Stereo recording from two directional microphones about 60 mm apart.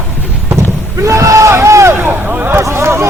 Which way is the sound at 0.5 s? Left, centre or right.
Right.